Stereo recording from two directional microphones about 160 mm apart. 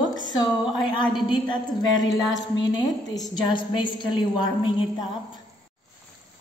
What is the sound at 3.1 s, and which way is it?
A woman's voice, 25° left (ahead or behind).